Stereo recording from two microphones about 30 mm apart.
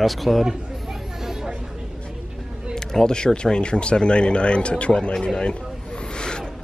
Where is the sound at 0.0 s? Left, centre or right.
Centre.